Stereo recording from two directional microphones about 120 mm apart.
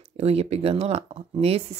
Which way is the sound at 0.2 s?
60° right (ahead or behind).